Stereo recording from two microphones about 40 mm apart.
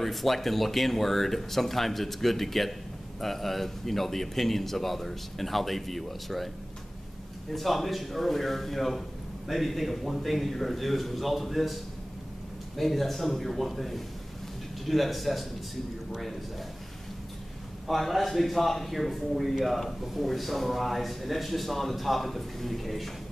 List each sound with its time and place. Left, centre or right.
0.0 s a man's voice: centre
7.5 s a man's voice: centre
17.8 s a man's voice: centre